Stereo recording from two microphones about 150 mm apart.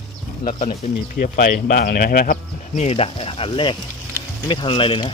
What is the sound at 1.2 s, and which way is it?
Speech, 65° left (ahead or behind).